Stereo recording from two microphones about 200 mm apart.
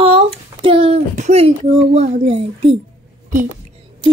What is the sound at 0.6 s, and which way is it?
Speech, 25° right (ahead or behind).